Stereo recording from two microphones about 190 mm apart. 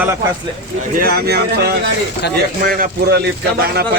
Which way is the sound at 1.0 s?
55° right (ahead or behind).